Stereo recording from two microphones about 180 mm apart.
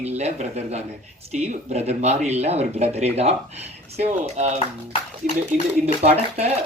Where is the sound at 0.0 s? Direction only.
35° right (ahead or behind).